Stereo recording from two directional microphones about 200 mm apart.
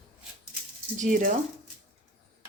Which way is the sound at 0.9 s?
40° right (ahead or behind).